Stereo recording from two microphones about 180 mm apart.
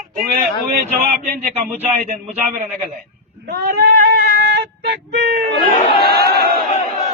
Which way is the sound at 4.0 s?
65° right (ahead or behind).